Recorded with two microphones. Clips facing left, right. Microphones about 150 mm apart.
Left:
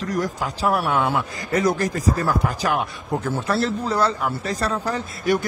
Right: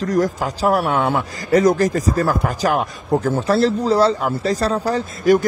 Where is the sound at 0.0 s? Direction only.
45° right (ahead or behind).